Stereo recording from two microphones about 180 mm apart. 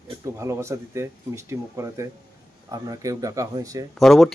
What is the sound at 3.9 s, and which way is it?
Speech, centre (ahead or behind).